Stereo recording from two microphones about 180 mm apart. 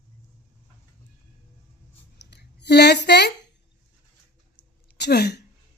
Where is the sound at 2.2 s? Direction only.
70° left (ahead or behind).